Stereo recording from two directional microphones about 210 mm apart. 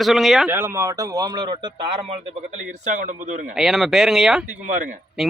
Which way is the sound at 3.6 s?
Centre (ahead or behind).